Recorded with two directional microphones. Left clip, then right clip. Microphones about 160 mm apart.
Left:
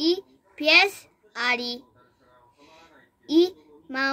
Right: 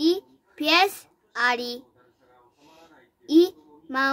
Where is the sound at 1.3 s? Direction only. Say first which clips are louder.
Right 2 dB; 25° right (ahead or behind).